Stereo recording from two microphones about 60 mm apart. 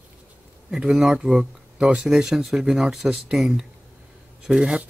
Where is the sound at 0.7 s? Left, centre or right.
Centre.